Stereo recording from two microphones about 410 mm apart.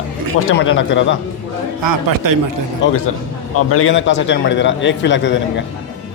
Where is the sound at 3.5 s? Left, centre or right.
Left.